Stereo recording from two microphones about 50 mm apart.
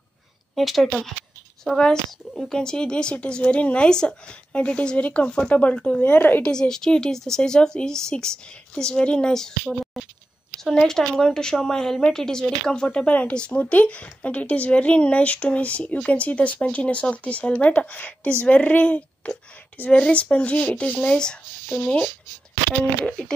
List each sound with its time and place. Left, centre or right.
0.6 s speech: centre
1.8 s a woman's voice: centre
2.3 s speech: centre
2.6 s speech: centre; by 6.4 s left
6.4 s a woman's voice: centre
10.6 s a woman's voice: centre
23.0 s a woman's voice: centre